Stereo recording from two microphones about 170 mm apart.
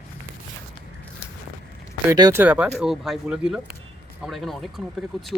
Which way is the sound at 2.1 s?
20° right (ahead or behind).